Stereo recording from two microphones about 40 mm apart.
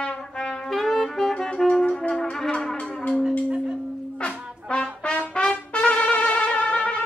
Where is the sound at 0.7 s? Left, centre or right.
Centre.